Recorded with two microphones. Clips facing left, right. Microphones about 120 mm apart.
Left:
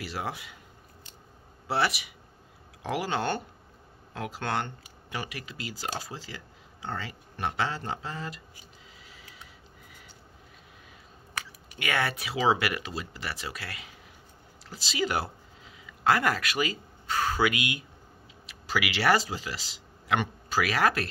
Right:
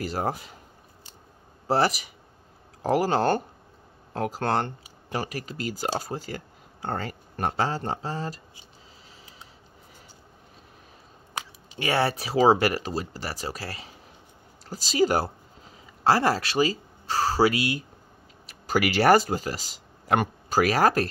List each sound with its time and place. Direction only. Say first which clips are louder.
0.0 s speech: right 6 dB; 45° right (ahead or behind)
1.7 s speech: right 5 dB; 40° right (ahead or behind)
11.3 s speech: right 4 dB; 30° right (ahead or behind)